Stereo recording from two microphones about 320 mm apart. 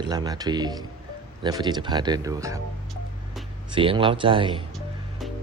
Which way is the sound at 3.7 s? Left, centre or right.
Centre.